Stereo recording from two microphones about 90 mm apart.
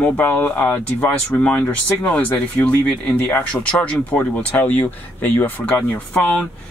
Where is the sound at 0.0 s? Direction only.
20° left (ahead or behind).